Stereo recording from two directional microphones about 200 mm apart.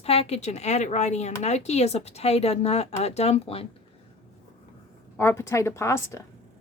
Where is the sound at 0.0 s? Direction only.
30° left (ahead or behind).